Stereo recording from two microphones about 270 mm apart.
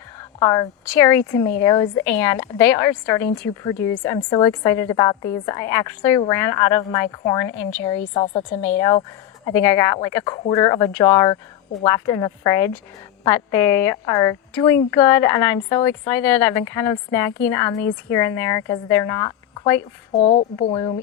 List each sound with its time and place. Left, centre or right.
0.2 s a woman's voice: centre
8.6 s speech: centre
20.1 s a woman's voice: left
20.7 s speech: centre